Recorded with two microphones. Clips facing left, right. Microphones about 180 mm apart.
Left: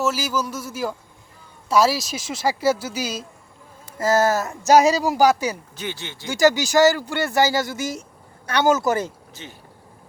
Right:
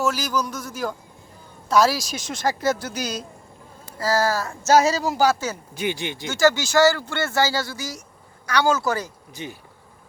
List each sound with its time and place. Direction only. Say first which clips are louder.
0.0 s speech: even; 5° left (ahead or behind)
3.9 s speech: left 3 dB; 25° left (ahead or behind)
5.7 s speech: right 5 dB; 15° right (ahead or behind)
6.2 s speech: left 2 dB; 15° left (ahead or behind)
9.3 s speech: right 6 dB; 15° right (ahead or behind)